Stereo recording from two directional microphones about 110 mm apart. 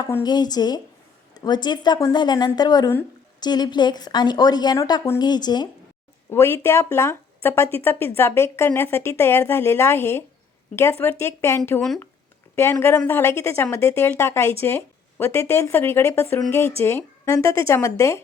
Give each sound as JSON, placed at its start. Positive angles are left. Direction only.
{"t": 0.2, "sound": "a woman's voice", "side_deg": 40}
{"t": 6.3, "sound": "speech", "side_deg": 20}
{"t": 12.8, "sound": "speech", "side_deg": 20}